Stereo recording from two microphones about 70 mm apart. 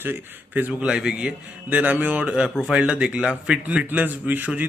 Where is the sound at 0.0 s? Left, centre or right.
Right.